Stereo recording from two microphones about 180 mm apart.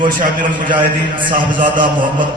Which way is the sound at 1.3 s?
50° right (ahead or behind).